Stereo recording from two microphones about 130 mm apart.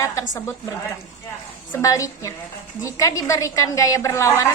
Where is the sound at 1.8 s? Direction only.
25° left (ahead or behind).